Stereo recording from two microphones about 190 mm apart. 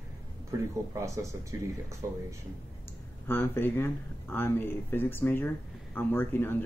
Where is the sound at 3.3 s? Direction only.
10° left (ahead or behind).